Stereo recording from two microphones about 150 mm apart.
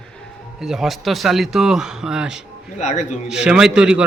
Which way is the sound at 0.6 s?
5° right (ahead or behind).